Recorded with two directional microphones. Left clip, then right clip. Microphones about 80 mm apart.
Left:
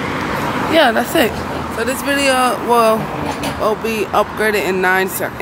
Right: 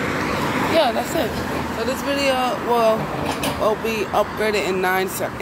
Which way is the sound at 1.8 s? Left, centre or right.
Left.